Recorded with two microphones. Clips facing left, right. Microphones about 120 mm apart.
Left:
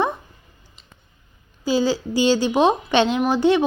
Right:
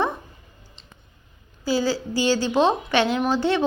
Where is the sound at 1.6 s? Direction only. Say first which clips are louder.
Left 3 dB; 20° left (ahead or behind).